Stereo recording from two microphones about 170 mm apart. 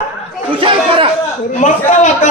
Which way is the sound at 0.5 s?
30° right (ahead or behind).